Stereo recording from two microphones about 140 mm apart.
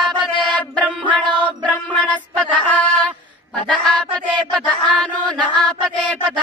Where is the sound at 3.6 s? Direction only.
10° left (ahead or behind).